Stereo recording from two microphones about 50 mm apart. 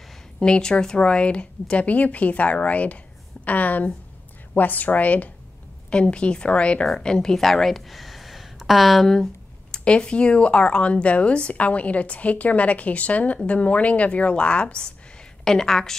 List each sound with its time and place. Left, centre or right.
0.4 s a woman's voice: centre
9.7 s speech: centre
15.4 s a woman's voice: centre